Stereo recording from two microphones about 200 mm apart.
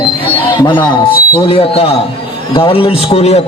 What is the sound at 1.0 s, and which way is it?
A man's voice, 25° left (ahead or behind).